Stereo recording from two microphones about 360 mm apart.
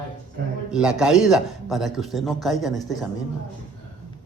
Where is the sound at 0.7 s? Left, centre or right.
Centre.